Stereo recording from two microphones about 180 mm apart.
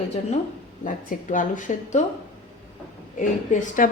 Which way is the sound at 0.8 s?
45° left (ahead or behind).